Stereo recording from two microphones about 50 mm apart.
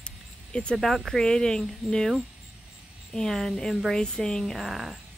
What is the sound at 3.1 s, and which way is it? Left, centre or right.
Speech, centre.